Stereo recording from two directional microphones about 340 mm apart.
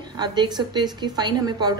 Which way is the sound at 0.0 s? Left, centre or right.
Centre.